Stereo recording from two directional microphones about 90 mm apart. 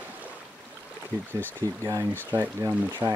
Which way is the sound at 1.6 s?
30° left (ahead or behind).